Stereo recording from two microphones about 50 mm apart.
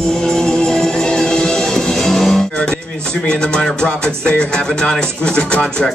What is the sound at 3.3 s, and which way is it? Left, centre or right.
Music, centre.